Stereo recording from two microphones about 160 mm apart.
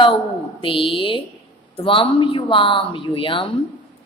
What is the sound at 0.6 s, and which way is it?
A woman's voice, 35° left (ahead or behind).